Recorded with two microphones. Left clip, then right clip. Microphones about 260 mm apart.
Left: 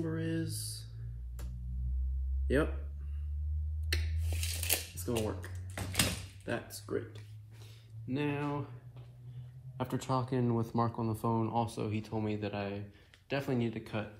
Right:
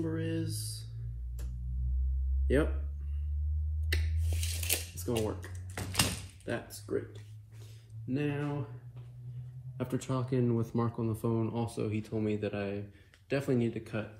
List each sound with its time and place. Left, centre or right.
0.0 s a sound: centre
0.5 s speech: right
2.4 s speech: centre
3.9 s a sound: centre
5.8 s door: centre
6.7 s speech: left
9.8 s speech: left